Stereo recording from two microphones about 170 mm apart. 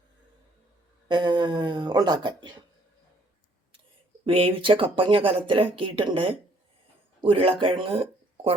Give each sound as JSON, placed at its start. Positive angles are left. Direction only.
{"t": 1.0, "sound": "speech", "side_deg": -25}
{"t": 4.3, "sound": "speech", "side_deg": -30}